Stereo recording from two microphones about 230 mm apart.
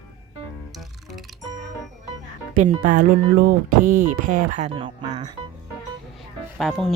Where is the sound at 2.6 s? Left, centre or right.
Right.